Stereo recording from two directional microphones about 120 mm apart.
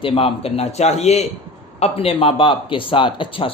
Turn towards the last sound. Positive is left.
turn(degrees=45)  # may be behind; listen again after turning